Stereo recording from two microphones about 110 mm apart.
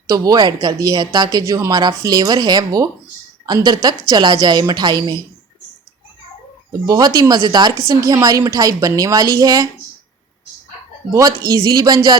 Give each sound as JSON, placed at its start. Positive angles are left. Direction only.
{"t": 0.1, "sound": "speech", "side_deg": -35}
{"t": 6.7, "sound": "speech", "side_deg": -35}
{"t": 11.1, "sound": "speech", "side_deg": -30}